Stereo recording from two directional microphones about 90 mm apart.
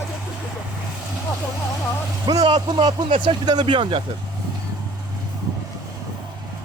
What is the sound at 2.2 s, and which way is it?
Speech, 50° right (ahead or behind).